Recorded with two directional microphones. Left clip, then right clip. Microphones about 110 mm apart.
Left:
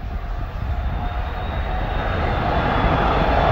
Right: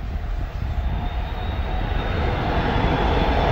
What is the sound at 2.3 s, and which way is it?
Vehicle, 50° left (ahead or behind).